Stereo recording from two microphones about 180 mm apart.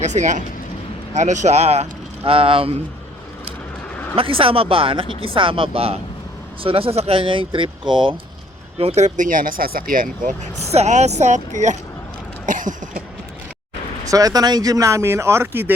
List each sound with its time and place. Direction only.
0.0 s speech: 40° right (ahead or behind)
4.1 s speech: 30° right (ahead or behind)
12.5 s cough: 45° right (ahead or behind)
14.0 s speech: 20° right (ahead or behind)